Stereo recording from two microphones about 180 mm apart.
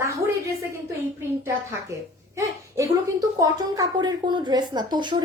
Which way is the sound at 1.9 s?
15° right (ahead or behind).